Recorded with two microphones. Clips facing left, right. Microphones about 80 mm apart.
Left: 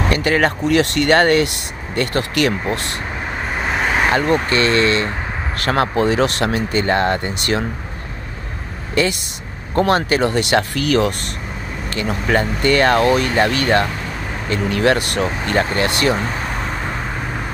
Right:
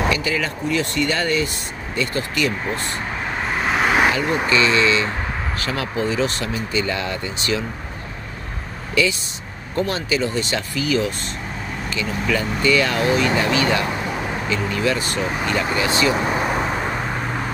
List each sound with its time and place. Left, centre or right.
0.1 s speech: left
3.8 s vehicle: centre
4.5 s speech: left
9.8 s speech: left
11.9 s speech: left
16.2 s vehicle: centre